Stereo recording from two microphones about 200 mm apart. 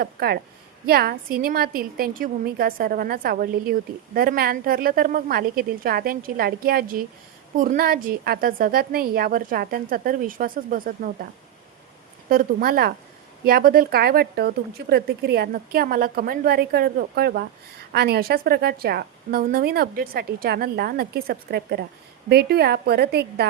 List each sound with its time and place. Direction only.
0.0 s a woman's voice: 50° right (ahead or behind)
12.3 s a woman's voice: 45° right (ahead or behind)